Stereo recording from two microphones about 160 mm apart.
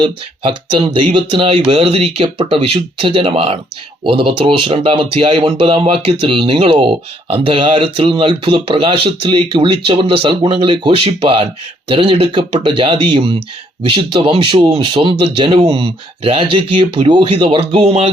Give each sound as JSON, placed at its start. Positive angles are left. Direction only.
{"t": 0.0, "sound": "speech", "side_deg": -35}